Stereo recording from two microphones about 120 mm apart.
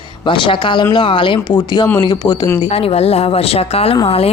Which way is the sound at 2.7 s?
55° left (ahead or behind).